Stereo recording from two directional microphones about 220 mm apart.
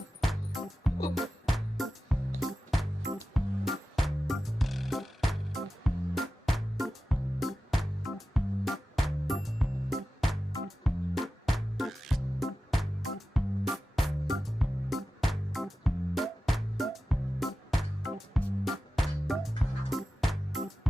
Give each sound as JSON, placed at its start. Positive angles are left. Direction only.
{"t": 0.2, "sound": "music", "side_deg": 0}